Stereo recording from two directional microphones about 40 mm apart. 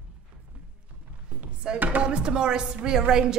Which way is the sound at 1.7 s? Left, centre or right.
Right.